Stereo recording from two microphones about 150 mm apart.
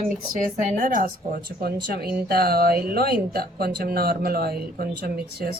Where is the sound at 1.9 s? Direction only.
90° right.